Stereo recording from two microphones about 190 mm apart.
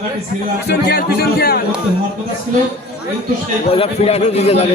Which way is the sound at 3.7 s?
30° left (ahead or behind).